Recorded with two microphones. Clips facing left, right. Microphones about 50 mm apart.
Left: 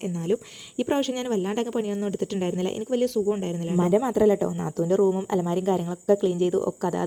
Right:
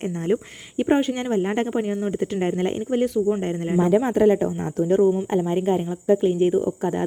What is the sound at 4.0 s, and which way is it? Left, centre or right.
Speech, right.